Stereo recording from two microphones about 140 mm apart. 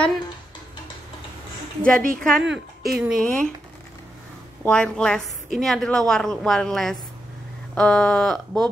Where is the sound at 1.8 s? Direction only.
10° left (ahead or behind).